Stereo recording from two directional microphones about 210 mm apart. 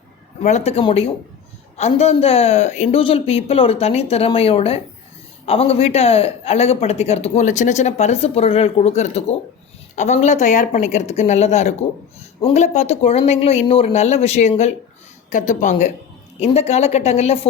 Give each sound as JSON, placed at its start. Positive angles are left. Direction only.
{"t": 0.4, "sound": "speech", "side_deg": 30}